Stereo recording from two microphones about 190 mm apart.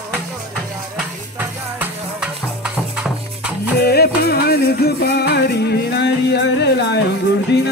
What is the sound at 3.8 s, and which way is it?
Music, 55° left (ahead or behind).